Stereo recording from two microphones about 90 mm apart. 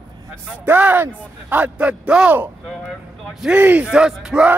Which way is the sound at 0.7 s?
20° right (ahead or behind).